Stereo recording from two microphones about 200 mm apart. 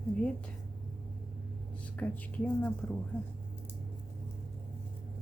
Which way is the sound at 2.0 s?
10° left (ahead or behind).